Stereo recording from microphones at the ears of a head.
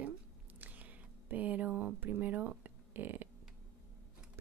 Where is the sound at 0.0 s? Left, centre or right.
Right.